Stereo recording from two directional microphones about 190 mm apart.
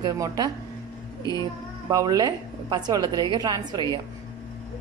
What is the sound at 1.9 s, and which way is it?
A woman's voice, 20° right (ahead or behind).